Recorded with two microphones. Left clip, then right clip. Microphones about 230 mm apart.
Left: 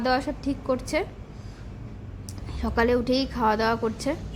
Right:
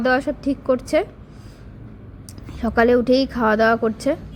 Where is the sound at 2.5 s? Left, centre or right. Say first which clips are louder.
Right 7 dB; centre.